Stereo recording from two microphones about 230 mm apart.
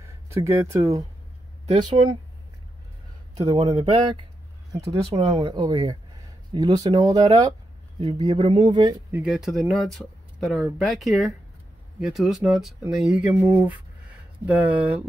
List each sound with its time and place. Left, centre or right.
0.0 s speech: centre
3.4 s speech: right
4.7 s speech: centre
9.2 s speech: centre